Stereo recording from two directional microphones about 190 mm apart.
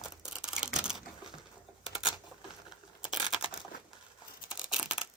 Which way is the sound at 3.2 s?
25° left (ahead or behind).